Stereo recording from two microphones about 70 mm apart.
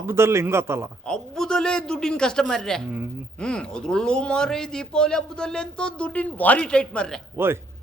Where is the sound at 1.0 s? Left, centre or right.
Centre.